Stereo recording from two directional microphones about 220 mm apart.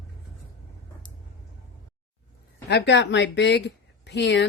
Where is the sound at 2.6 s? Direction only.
50° left (ahead or behind).